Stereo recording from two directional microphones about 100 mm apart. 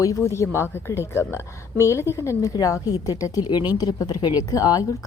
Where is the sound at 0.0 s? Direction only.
30° left (ahead or behind).